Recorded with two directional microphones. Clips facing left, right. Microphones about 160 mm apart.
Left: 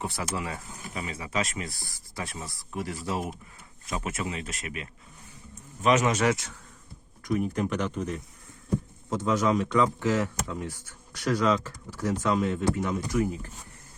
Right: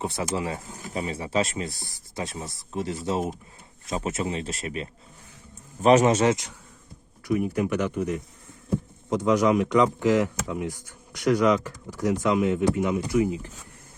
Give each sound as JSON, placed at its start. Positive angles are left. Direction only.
{"t": 0.0, "sound": "speech", "side_deg": -20}
{"t": 7.3, "sound": "speech", "side_deg": -10}